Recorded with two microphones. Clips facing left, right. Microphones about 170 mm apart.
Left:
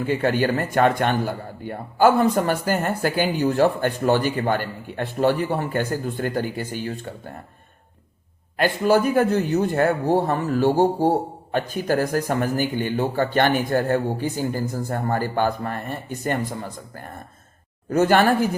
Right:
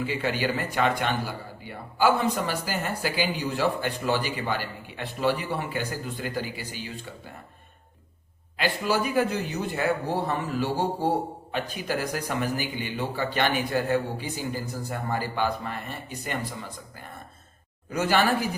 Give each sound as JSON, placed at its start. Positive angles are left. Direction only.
{"t": 0.0, "sound": "speech", "side_deg": 50}
{"t": 8.5, "sound": "speech", "side_deg": 50}